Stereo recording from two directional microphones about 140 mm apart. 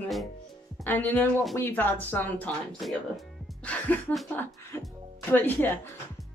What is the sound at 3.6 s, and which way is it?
Speech, 10° left (ahead or behind).